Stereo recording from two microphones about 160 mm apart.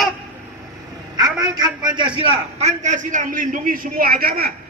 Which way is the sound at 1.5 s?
25° right (ahead or behind).